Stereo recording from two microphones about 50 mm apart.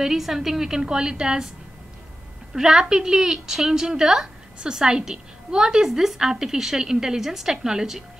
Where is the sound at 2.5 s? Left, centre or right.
Centre.